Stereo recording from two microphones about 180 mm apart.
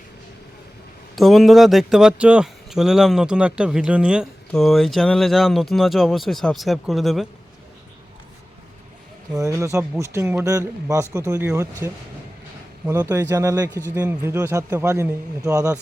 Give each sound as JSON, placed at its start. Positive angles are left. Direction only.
{"t": 1.1, "sound": "speech", "side_deg": 0}
{"t": 9.3, "sound": "a man's voice", "side_deg": -20}